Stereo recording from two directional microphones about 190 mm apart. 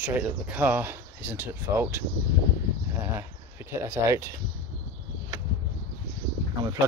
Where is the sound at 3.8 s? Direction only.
15° right (ahead or behind).